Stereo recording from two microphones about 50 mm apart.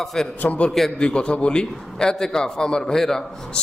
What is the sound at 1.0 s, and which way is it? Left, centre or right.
A man's voice, centre.